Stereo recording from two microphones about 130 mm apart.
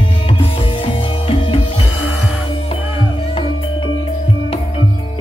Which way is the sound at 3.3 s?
40° left (ahead or behind).